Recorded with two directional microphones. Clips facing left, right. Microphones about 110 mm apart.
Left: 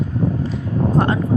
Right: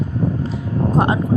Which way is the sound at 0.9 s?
15° right (ahead or behind).